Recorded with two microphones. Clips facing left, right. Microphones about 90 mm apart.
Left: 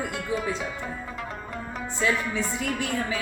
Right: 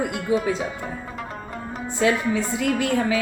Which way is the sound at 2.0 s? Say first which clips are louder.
Right 5 dB; 75° right (ahead or behind).